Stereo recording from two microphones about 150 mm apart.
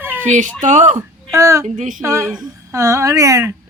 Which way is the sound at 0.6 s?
55° right (ahead or behind).